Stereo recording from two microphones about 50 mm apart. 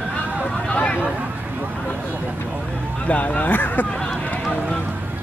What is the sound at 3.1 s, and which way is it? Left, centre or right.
Speech, left.